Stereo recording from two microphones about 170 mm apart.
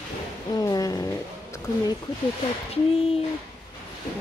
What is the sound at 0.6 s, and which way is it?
Cat, 20° left (ahead or behind).